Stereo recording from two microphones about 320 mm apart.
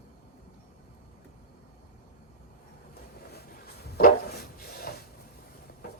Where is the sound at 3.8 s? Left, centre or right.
Left.